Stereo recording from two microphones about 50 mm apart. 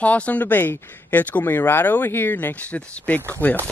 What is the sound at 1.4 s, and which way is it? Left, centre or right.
Speech, left.